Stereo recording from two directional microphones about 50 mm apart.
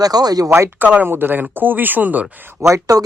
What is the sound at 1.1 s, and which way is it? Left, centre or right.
Speech, right.